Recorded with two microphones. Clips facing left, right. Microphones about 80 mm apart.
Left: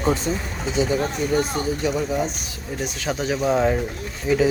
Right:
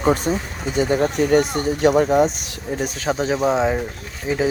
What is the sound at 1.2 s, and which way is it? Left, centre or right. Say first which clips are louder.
Speech: right 5 dB; right.